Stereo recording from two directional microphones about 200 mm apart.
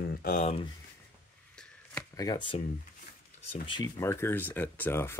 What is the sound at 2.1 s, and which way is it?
Speech, 20° left (ahead or behind).